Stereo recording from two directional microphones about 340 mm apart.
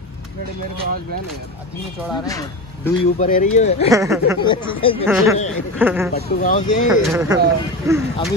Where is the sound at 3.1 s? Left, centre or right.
Left.